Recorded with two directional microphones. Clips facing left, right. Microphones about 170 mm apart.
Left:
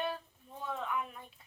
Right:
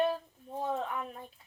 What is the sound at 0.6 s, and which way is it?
Speech, 40° right (ahead or behind).